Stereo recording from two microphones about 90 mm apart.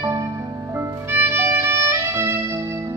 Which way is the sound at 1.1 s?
25° right (ahead or behind).